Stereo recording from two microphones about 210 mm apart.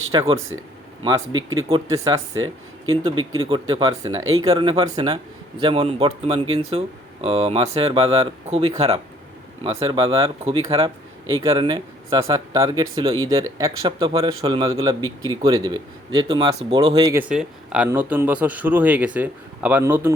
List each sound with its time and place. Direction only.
0.1 s a man's voice: 20° right (ahead or behind)
1.4 s speech: 75° right (ahead or behind)
1.7 s speech: 15° right (ahead or behind)
3.4 s a man's voice: 20° right (ahead or behind)
17.2 s speech: 5° right (ahead or behind)